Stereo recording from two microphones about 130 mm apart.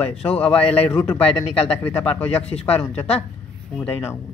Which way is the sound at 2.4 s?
55° left (ahead or behind).